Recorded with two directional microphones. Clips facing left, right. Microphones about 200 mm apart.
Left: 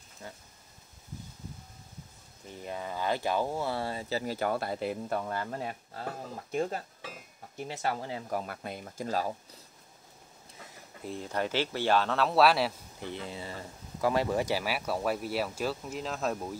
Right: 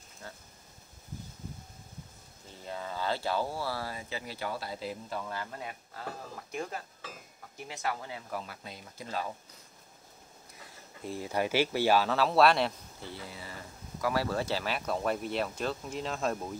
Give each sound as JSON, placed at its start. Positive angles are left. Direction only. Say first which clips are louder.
{"t": 0.2, "sound": "a sound", "louder": "left 2 dB", "side_deg": 15}
{"t": 2.4, "sound": "speech", "louder": "left 2 dB", "side_deg": 15}
{"t": 6.5, "sound": "speech", "louder": "left 7 dB", "side_deg": 25}
{"t": 8.4, "sound": "speech", "louder": "left 6 dB", "side_deg": 55}
{"t": 11.1, "sound": "speech", "louder": "right 1 dB", "side_deg": -5}
{"t": 13.0, "sound": "speech", "louder": "left 5 dB", "side_deg": 20}